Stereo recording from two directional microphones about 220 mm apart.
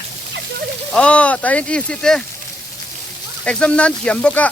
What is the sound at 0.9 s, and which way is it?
Speech, 5° left (ahead or behind).